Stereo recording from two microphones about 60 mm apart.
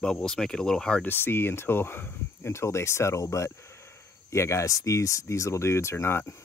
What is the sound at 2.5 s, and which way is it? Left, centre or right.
Speech, left.